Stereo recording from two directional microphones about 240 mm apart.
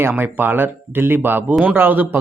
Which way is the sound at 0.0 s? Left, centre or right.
Centre.